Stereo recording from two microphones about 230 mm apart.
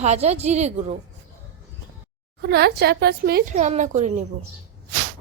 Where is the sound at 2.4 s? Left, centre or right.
Right.